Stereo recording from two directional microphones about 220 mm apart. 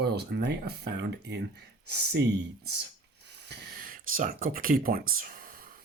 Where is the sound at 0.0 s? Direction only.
50° right (ahead or behind).